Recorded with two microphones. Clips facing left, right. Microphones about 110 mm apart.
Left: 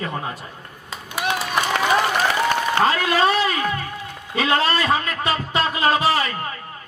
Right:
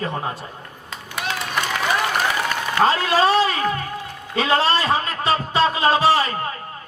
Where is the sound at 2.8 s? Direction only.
30° right (ahead or behind).